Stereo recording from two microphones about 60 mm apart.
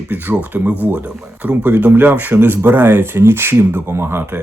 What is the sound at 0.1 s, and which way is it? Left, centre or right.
Speech, right.